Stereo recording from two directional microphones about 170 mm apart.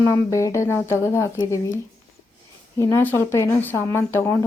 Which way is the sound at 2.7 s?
20° left (ahead or behind).